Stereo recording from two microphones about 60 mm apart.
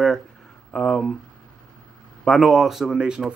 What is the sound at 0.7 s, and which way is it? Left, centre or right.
Speech, centre.